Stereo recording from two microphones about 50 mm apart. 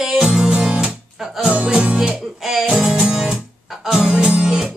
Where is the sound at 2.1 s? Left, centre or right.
Centre.